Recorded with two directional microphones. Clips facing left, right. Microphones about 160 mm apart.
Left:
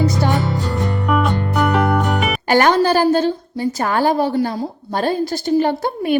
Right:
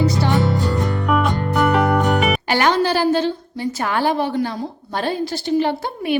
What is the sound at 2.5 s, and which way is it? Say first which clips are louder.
A woman's voice: left 6 dB; 45° left (ahead or behind).